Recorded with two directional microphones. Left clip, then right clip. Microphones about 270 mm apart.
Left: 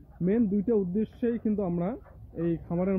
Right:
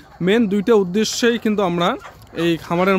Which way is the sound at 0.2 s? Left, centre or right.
Centre.